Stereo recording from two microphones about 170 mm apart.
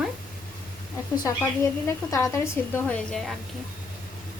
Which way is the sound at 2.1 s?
15° left (ahead or behind).